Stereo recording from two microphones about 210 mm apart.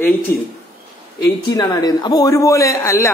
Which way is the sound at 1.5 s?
20° left (ahead or behind).